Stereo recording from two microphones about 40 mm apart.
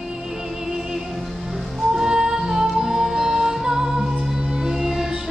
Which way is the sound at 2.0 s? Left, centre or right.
Centre.